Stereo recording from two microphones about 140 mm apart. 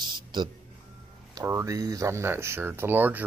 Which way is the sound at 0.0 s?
30° right (ahead or behind).